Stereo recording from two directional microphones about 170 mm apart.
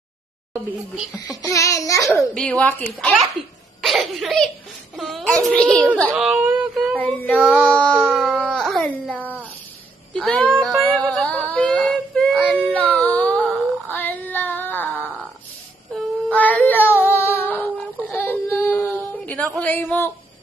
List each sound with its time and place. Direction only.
1.3 s babbling: 20° left (ahead or behind)
2.3 s speech: 5° left (ahead or behind)
6.3 s a sound: 10° right (ahead or behind)
6.9 s speech: 10° left (ahead or behind)
8.1 s music: centre (ahead or behind)
10.1 s child singing: 5° left (ahead or behind)
12.9 s a sound: 10° left (ahead or behind)
15.9 s female singing: 5° left (ahead or behind)
18.6 s a sound: 15° left (ahead or behind)